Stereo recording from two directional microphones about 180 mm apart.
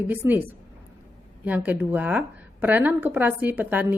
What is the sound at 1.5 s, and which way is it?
A woman's voice, 10° right (ahead or behind).